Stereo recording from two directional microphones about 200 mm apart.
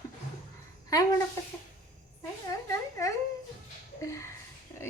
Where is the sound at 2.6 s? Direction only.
15° left (ahead or behind).